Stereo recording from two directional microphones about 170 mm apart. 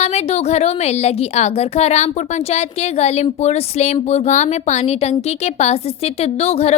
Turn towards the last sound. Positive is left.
turn(degrees=35)  # may be behind; listen again after turning